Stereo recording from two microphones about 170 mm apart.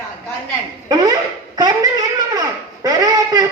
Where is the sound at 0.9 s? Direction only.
25° right (ahead or behind).